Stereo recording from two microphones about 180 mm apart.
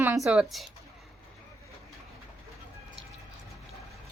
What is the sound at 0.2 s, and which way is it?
Speech, 5° right (ahead or behind).